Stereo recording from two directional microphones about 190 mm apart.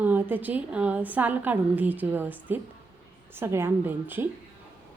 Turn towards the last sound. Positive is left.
turn(degrees=-10)  # may be behind; listen again after turning